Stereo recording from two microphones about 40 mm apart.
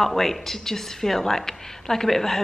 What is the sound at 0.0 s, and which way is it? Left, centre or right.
A woman's voice, centre.